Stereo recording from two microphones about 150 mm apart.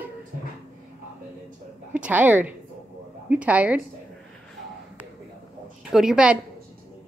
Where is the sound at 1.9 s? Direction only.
10° right (ahead or behind).